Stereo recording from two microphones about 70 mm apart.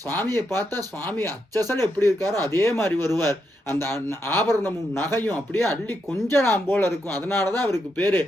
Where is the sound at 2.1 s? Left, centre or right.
Right.